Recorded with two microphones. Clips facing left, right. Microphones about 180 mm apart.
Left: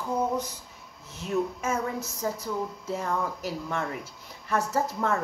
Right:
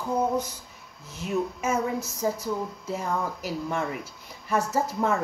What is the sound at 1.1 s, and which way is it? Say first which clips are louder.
Speech: even; 5° right (ahead or behind).